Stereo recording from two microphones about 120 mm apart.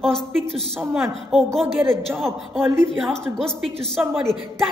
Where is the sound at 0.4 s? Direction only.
55° right (ahead or behind).